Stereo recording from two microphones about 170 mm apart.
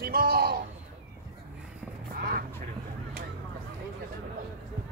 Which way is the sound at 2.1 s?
60° right (ahead or behind).